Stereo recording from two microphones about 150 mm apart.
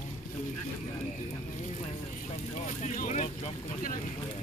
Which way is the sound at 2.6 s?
55° left (ahead or behind).